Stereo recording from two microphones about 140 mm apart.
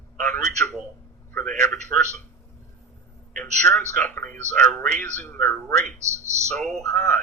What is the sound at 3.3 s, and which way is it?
A man's voice, 10° left (ahead or behind).